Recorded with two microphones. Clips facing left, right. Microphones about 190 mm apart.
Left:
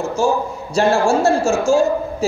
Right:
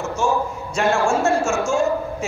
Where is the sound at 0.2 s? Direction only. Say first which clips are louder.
Left 3 dB; 35° left (ahead or behind).